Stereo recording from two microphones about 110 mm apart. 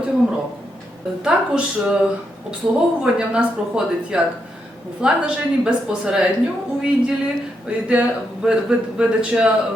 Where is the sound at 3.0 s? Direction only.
5° right (ahead or behind).